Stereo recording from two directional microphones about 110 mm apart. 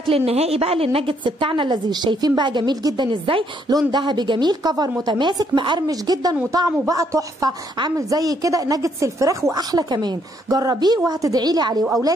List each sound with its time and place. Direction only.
0.1 s a woman's voice: 65° right (ahead or behind); by 11.8 s 40° right (ahead or behind)